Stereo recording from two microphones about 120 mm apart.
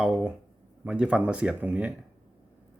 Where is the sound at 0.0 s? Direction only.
5° right (ahead or behind).